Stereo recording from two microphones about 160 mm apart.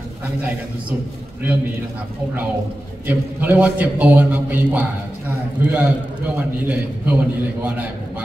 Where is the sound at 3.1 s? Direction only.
10° right (ahead or behind).